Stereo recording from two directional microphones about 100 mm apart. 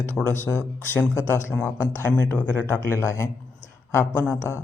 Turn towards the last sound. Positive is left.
turn(degrees=25)  # may be behind; listen again after turning